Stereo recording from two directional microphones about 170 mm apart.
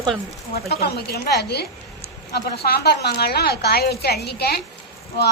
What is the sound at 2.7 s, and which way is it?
A woman's voice, 70° left (ahead or behind).